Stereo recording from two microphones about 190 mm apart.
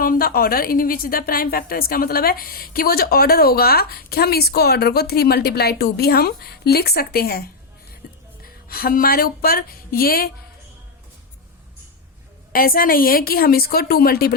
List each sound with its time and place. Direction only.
0.0 s a woman's voice: 50° left (ahead or behind)
8.0 s music: 55° left (ahead or behind)
8.4 s speech: 50° left (ahead or behind)
12.5 s a woman's voice: 50° left (ahead or behind)